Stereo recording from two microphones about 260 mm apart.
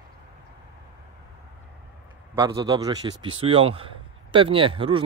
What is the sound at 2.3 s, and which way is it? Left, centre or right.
A man's voice, centre.